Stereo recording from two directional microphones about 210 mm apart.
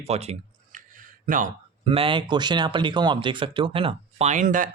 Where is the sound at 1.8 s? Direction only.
25° right (ahead or behind).